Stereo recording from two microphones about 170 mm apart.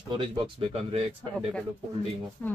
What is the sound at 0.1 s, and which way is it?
Speech, 30° right (ahead or behind).